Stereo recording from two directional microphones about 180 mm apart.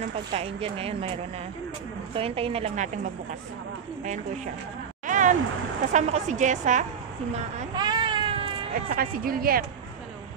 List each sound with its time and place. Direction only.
0.3 s a woman's voice: 35° right (ahead or behind)
5.0 s a sound: 45° right (ahead or behind)
5.9 s a woman's voice: 40° right (ahead or behind)
7.7 s baby cry: 25° right (ahead or behind)
8.7 s speech: 50° right (ahead or behind)